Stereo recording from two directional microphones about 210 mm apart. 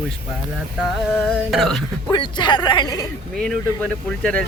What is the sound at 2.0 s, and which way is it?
Speech, 20° left (ahead or behind).